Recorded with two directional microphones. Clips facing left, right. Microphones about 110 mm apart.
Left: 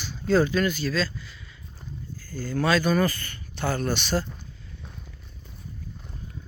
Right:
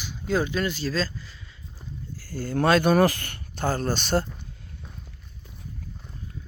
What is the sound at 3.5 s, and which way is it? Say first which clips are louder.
Speech: right 1 dB; 40° right (ahead or behind).